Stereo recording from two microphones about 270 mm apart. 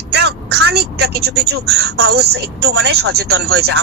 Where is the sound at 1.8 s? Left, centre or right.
Right.